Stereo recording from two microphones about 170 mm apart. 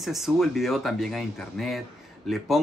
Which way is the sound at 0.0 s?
Centre (ahead or behind).